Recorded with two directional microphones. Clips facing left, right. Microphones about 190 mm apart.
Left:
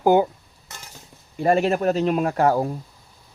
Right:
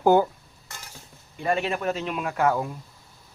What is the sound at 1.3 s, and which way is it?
Speech, 40° left (ahead or behind).